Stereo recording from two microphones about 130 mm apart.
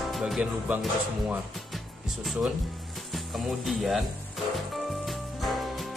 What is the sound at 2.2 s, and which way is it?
Speech, centre (ahead or behind).